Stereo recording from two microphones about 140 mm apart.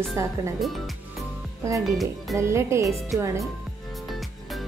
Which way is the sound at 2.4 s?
20° right (ahead or behind).